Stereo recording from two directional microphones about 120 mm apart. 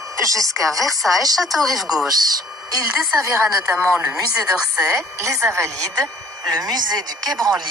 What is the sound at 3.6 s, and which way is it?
Speech, 5° right (ahead or behind).